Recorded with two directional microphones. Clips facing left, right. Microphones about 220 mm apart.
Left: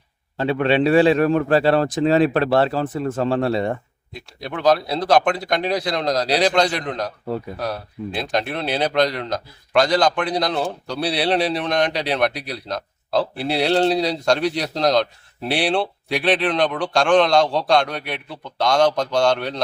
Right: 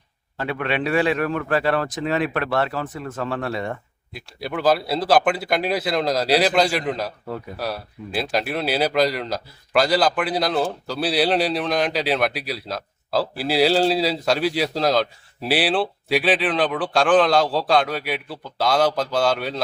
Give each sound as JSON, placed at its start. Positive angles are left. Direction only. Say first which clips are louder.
{"t": 0.3, "sound": "a man's voice", "louder": "left 7 dB", "side_deg": 30}
{"t": 4.1, "sound": "speech", "louder": "right 1 dB", "side_deg": -5}